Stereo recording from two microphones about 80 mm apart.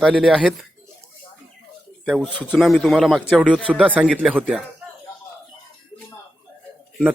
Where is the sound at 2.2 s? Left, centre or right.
Centre.